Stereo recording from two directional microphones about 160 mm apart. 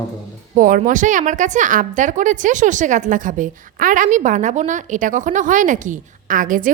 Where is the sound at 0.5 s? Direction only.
55° right (ahead or behind).